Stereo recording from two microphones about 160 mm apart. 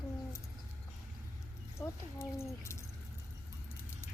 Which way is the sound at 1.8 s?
15° left (ahead or behind).